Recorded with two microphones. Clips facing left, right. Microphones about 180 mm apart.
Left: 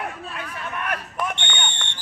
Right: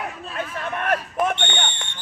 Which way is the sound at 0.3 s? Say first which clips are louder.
Right 4 dB; 45° right (ahead or behind).